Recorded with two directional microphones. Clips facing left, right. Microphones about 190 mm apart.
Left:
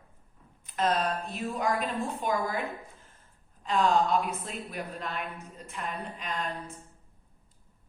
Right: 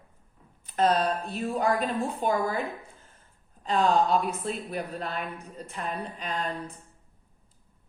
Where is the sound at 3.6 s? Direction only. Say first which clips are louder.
Right 2 dB; 35° right (ahead or behind).